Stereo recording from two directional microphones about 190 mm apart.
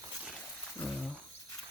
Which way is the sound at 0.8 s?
Centre (ahead or behind).